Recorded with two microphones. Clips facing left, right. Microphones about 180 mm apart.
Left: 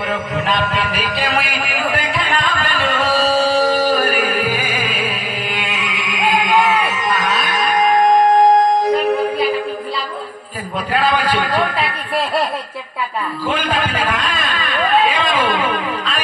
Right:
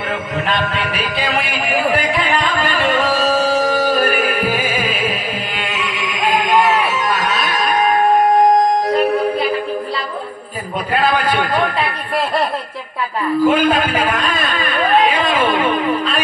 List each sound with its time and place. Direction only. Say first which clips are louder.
6.1 s music: even; 40° right (ahead or behind)
13.5 s a man's voice: right 6 dB; 10° right (ahead or behind)